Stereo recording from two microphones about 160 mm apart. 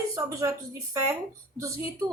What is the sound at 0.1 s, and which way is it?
A woman's voice, 20° right (ahead or behind).